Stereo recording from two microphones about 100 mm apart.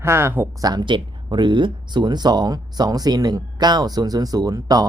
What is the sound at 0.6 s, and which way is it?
Speech, 45° right (ahead or behind).